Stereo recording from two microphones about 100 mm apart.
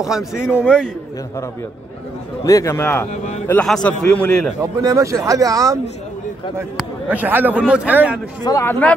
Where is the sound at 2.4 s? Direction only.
35° left (ahead or behind).